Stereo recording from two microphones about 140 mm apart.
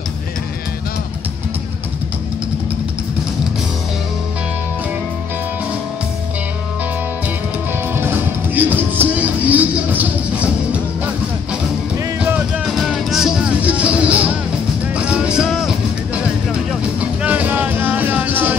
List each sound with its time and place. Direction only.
7.9 s music: 15° right (ahead or behind)
12.2 s music: 10° right (ahead or behind)
15.0 s vehicle: 5° right (ahead or behind)
17.0 s music: 10° right (ahead or behind)